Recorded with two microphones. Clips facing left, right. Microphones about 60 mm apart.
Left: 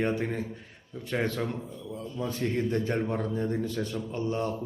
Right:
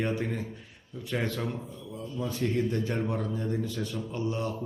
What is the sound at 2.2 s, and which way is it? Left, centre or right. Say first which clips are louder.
A man's voice: even; left.